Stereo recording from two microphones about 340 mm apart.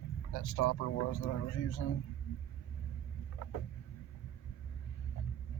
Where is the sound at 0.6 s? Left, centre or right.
Left.